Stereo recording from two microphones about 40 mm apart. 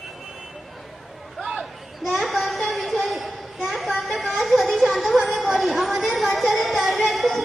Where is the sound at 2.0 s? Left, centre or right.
Centre.